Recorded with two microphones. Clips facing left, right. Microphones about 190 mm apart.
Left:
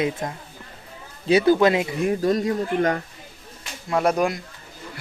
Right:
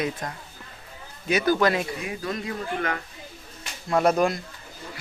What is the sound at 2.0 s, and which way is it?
Speech, 45° left (ahead or behind).